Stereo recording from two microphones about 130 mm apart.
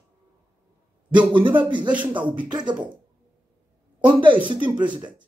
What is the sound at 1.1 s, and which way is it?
Speech, 40° right (ahead or behind).